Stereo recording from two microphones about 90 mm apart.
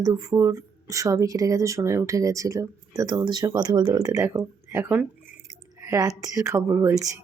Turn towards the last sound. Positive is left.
turn(degrees=-30)  # may be behind; listen again after turning